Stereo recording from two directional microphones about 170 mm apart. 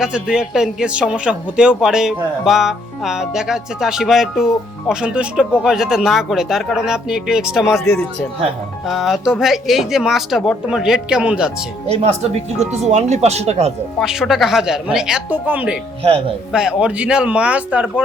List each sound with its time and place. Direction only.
0.0 s a man's voice: 5° right (ahead or behind)
8.9 s a man's voice: centre (ahead or behind)
12.5 s speech: 40° right (ahead or behind)
14.0 s a man's voice: 5° right (ahead or behind)